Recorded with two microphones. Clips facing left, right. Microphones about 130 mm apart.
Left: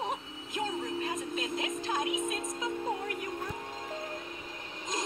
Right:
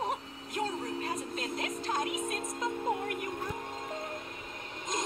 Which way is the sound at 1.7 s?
Centre (ahead or behind).